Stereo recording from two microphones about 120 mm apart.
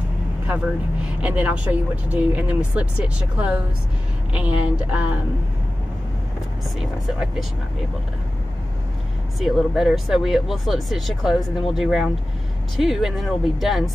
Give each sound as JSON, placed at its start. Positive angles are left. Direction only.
{"t": 1.0, "sound": "speech", "side_deg": -10}
{"t": 6.8, "sound": "speech", "side_deg": -5}
{"t": 9.4, "sound": "speech", "side_deg": 0}